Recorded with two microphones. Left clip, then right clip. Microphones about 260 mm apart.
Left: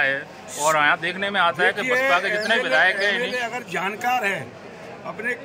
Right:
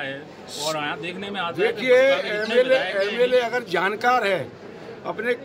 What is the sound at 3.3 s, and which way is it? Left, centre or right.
A man's voice, centre.